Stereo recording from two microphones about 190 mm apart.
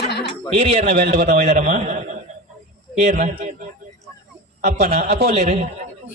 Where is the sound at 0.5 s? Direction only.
30° right (ahead or behind).